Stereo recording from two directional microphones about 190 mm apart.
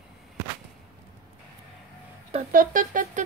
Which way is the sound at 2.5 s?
45° right (ahead or behind).